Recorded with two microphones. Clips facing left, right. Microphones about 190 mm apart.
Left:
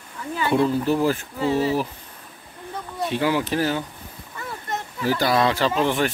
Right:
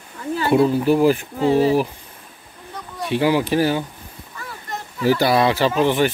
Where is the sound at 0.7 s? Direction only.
10° right (ahead or behind).